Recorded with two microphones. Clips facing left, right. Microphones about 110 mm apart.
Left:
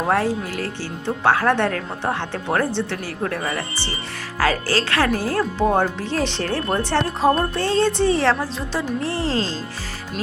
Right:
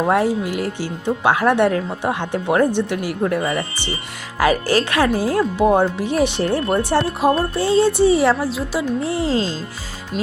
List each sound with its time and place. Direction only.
0.1 s speech: 15° right (ahead or behind)